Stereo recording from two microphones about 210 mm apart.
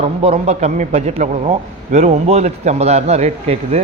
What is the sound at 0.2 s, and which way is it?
A man's voice, 30° right (ahead or behind).